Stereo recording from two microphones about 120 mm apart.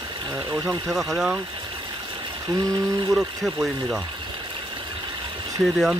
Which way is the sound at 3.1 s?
5° right (ahead or behind).